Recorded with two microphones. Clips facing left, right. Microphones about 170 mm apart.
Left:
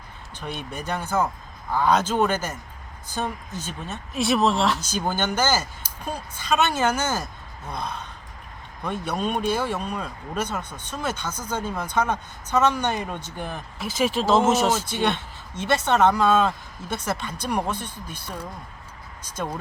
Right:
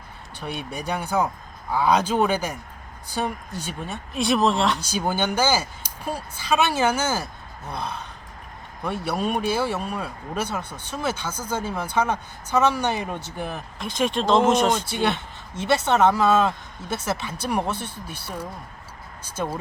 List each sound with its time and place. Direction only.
0.3 s speech: 10° right (ahead or behind)
4.1 s speech: centre (ahead or behind)
4.8 s speech: 10° right (ahead or behind)
13.7 s speech: 5° left (ahead or behind)
15.0 s speech: 5° right (ahead or behind)